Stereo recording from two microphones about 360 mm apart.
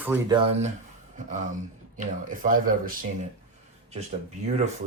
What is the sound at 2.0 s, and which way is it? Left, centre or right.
Speech, right.